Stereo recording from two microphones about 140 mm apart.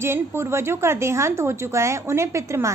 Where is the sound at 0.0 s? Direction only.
15° right (ahead or behind).